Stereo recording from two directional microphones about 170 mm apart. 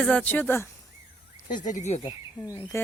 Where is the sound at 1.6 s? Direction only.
45° left (ahead or behind).